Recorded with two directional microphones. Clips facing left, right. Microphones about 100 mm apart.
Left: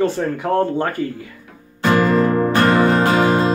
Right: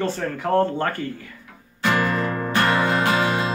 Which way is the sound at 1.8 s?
40° left (ahead or behind).